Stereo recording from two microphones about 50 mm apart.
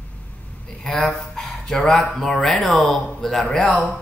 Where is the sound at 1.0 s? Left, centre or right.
Centre.